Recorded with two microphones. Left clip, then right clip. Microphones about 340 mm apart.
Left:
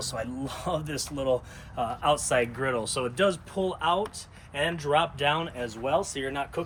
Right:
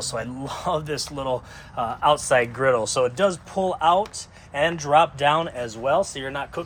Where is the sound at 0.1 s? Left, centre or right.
Centre.